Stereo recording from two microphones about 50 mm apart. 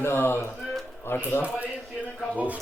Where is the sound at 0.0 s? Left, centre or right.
Left.